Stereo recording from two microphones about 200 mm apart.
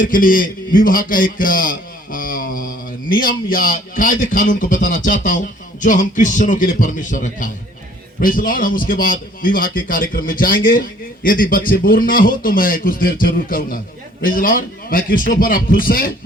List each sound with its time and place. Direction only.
0.0 s a man's voice: 45° left (ahead or behind)